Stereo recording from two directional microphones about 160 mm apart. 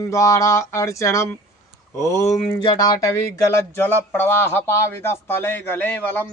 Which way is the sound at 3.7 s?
10° left (ahead or behind).